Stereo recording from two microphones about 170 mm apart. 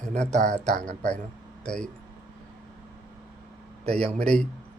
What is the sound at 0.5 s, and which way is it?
Speech, 5° left (ahead or behind).